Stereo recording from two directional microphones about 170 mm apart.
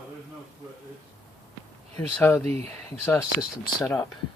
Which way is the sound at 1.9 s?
10° left (ahead or behind).